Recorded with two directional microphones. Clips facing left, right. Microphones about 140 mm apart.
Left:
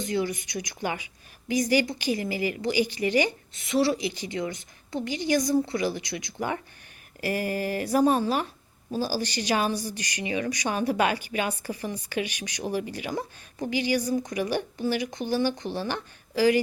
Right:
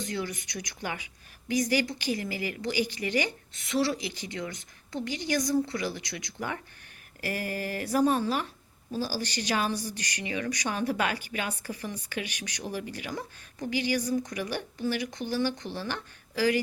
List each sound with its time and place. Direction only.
0.0 s speech: 15° left (ahead or behind)